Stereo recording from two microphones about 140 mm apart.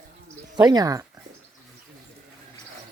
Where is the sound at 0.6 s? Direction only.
30° right (ahead or behind).